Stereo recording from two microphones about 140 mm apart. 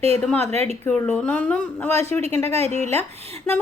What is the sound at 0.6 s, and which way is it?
Speech, 10° left (ahead or behind).